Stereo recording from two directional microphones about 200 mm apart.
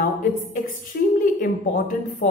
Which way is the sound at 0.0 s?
45° left (ahead or behind).